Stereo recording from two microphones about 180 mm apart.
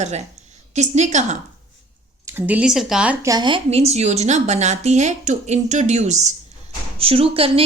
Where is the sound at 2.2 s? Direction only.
10° right (ahead or behind).